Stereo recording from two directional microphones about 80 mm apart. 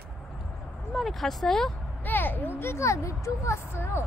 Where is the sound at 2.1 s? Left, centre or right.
Left.